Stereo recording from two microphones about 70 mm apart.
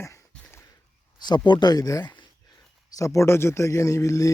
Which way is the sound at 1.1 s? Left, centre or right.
Left.